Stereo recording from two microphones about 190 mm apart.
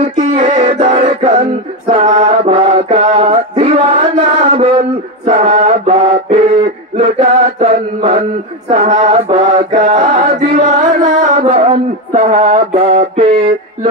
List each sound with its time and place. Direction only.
0.3 s music: 30° right (ahead or behind)
1.9 s mantra: 30° right (ahead or behind)
7.0 s chant: 30° right (ahead or behind)
8.6 s mantra: 40° right (ahead or behind)
9.7 s chant: 40° right (ahead or behind)
9.9 s chant: 25° right (ahead or behind)
10.3 s chant: 40° right (ahead or behind)
11.4 s music: 30° right (ahead or behind)
13.2 s mantra: 30° right (ahead or behind)